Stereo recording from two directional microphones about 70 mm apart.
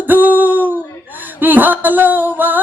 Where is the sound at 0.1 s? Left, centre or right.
Right.